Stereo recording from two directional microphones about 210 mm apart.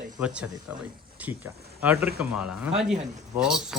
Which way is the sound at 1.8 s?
5° right (ahead or behind).